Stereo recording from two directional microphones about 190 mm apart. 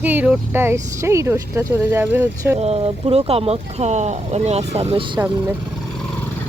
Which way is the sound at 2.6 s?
35° right (ahead or behind).